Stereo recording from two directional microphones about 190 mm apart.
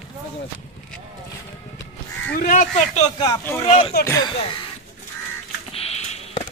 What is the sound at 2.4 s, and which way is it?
Speech, 45° left (ahead or behind).